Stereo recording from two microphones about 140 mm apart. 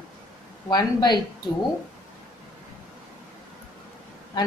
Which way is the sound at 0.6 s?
30° left (ahead or behind).